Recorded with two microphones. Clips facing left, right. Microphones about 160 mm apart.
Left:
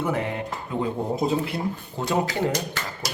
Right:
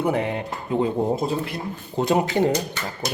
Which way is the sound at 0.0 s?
20° right (ahead or behind).